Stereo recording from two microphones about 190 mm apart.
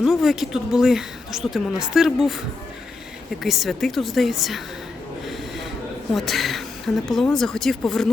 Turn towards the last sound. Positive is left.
turn(degrees=0)  # may be behind; listen again after turning